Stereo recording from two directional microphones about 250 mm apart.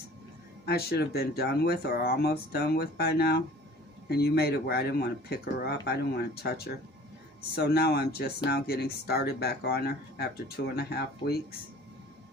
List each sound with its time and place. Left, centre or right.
0.6 s speech: left